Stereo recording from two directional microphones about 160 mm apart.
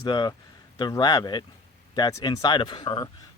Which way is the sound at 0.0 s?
25° left (ahead or behind).